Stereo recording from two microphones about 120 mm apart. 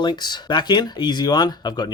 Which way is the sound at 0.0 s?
40° left (ahead or behind).